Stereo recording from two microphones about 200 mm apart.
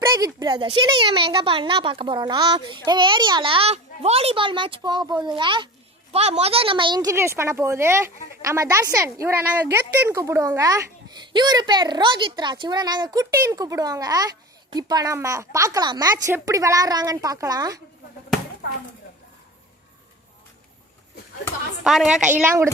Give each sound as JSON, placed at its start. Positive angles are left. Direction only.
{"t": 0.0, "sound": "a woman's voice", "side_deg": -20}
{"t": 21.8, "sound": "a woman's voice", "side_deg": -5}